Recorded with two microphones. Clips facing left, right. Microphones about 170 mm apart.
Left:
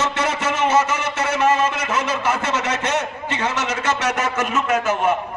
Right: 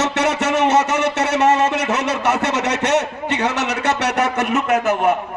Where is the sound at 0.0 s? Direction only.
70° right (ahead or behind).